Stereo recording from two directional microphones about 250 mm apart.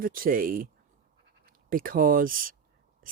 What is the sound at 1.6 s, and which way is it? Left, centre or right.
Speech, right.